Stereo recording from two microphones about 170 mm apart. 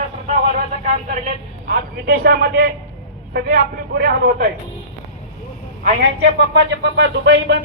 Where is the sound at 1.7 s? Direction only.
60° right (ahead or behind).